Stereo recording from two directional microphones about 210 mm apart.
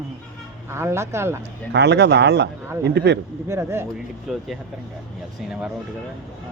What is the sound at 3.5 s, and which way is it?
Speech, 15° right (ahead or behind).